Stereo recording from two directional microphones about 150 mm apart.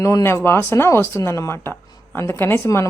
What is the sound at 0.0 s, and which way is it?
Speech, 20° left (ahead or behind).